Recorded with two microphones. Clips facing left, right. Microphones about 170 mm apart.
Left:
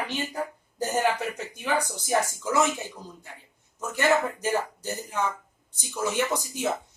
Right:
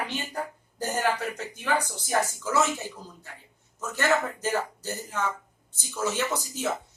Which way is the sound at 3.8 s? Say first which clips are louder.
Left 2 dB; 10° left (ahead or behind).